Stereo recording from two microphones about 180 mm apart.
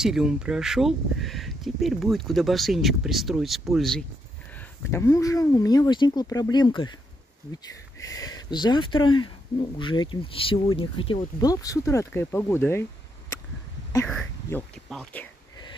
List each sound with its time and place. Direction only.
0.0 s speech: 5° right (ahead or behind)
4.6 s speech: 15° left (ahead or behind)
8.1 s speech: 20° left (ahead or behind)
14.0 s speech: 5° left (ahead or behind)